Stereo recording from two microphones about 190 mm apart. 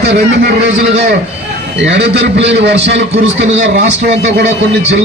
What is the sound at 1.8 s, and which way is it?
A man's voice, 65° right (ahead or behind).